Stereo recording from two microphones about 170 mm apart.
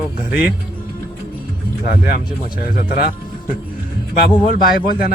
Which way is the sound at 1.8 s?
60° left (ahead or behind).